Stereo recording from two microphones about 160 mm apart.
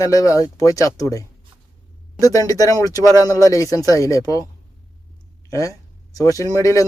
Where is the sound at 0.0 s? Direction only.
20° left (ahead or behind).